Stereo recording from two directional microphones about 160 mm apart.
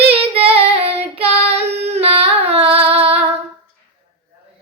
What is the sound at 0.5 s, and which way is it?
Child singing, 40° right (ahead or behind).